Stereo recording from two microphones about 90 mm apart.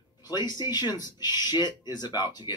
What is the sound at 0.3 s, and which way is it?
Speech, 50° left (ahead or behind).